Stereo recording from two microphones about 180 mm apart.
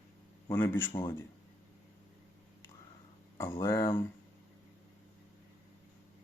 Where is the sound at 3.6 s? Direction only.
15° left (ahead or behind).